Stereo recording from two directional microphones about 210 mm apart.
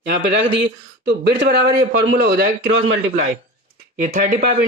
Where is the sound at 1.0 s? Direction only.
55° right (ahead or behind).